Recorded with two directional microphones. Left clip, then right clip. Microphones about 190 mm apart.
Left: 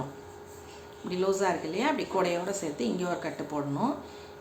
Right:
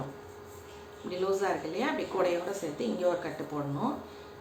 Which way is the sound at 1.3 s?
40° left (ahead or behind).